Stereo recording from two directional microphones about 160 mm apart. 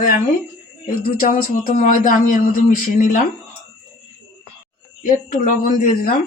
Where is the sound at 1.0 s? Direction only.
65° left (ahead or behind).